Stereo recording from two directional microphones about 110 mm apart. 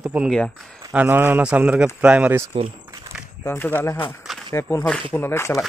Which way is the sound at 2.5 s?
55° right (ahead or behind).